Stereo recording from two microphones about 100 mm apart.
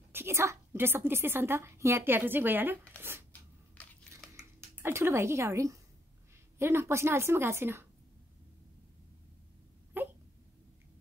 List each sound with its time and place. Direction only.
0.1 s a woman's voice: 25° right (ahead or behind)
3.0 s a sound: 20° right (ahead or behind)
3.8 s crushing: 15° left (ahead or behind)
4.8 s a woman's voice: 25° right (ahead or behind)
9.9 s hiccup: 20° right (ahead or behind)